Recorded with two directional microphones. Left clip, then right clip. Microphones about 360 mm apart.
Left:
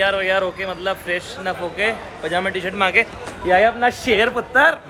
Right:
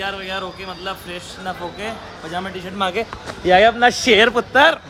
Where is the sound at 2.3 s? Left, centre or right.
Centre.